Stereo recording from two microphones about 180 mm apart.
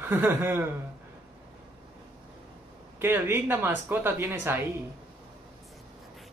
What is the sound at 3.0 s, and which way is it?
Speech, 15° right (ahead or behind).